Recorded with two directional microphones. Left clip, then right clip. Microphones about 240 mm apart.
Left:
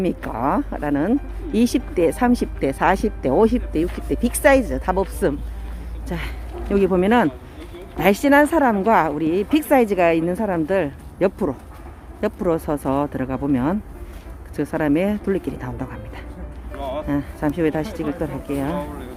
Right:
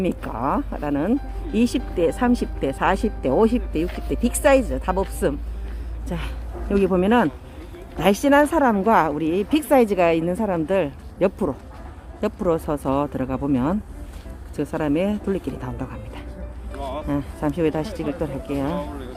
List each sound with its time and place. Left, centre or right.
0.1 s a woman's voice: centre
2.2 s a woman's voice: centre
16.7 s a sound: left
17.1 s a woman's voice: centre